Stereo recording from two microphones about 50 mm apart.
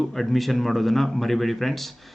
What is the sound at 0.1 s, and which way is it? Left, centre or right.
Speech, centre.